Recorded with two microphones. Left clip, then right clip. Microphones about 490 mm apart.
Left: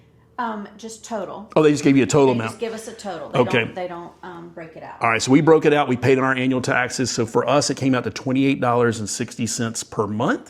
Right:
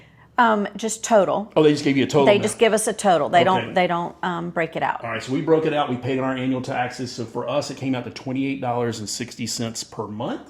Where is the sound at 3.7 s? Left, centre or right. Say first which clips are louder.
Right 9 dB; right.